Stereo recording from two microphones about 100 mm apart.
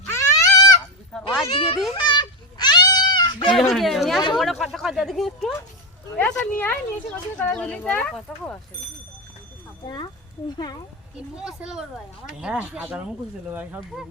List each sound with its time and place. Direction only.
0.1 s a sound: 35° left (ahead or behind)
1.5 s a child's voice: 70° left (ahead or behind)
1.9 s a sound: 55° left (ahead or behind)
3.5 s speech: centre (ahead or behind)
6.1 s speech: 20° left (ahead or behind)
8.3 s speech: centre (ahead or behind)
9.8 s speech: 50° left (ahead or behind)
11.3 s speech: 5° right (ahead or behind)